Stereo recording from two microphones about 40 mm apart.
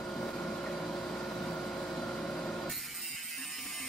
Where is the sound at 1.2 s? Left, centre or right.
Left.